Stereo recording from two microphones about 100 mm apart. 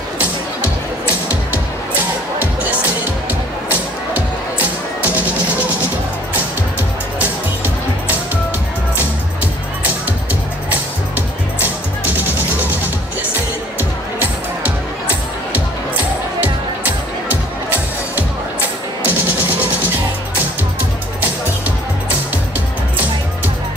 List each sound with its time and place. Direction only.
5.0 s music: 15° right (ahead or behind)
7.2 s music: 15° right (ahead or behind)
19.0 s music: 15° right (ahead or behind)